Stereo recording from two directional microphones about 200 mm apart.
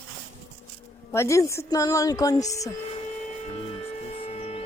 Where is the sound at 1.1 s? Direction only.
15° left (ahead or behind).